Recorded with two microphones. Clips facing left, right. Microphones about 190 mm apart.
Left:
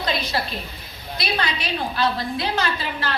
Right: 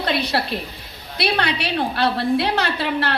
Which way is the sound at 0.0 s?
65° right (ahead or behind).